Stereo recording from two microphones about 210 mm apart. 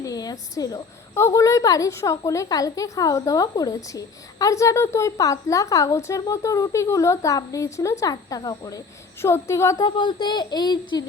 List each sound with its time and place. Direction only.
0.0 s a woman's voice: 15° left (ahead or behind)